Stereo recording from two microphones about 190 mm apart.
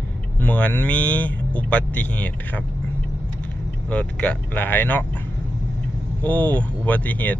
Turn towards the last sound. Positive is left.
turn(degrees=10)  # may be behind; listen again after turning